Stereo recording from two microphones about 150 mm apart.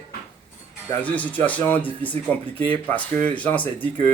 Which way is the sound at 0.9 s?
10° left (ahead or behind).